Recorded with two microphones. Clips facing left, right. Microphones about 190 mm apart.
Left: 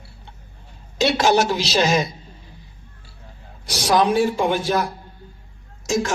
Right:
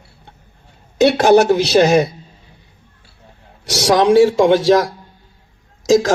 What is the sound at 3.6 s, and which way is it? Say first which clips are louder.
A man's voice: right 5 dB; 80° right.